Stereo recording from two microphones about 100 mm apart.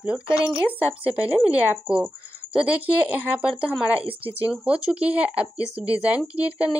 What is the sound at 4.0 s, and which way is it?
Speech, 65° right (ahead or behind).